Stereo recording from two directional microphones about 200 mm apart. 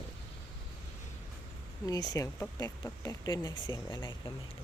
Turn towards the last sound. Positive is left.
turn(degrees=20)  # may be behind; listen again after turning